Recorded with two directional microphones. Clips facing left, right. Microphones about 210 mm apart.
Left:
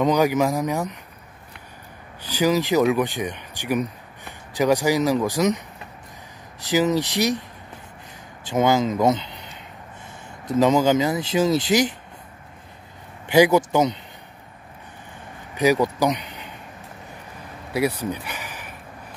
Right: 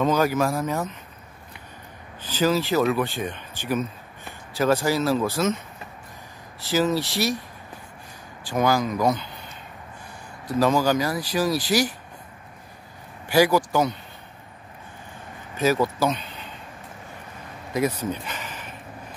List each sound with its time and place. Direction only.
0.0 s speech: 15° left (ahead or behind)
2.2 s speech: 15° left (ahead or behind)
6.6 s speech: 15° left (ahead or behind)
8.5 s speech: 20° left (ahead or behind)
13.3 s speech: 20° left (ahead or behind)
15.5 s speech: 15° left (ahead or behind)
17.7 s a sound: 10° left (ahead or behind)